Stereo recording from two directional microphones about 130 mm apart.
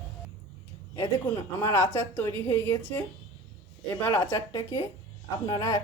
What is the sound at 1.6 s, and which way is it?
A woman's voice, 15° left (ahead or behind).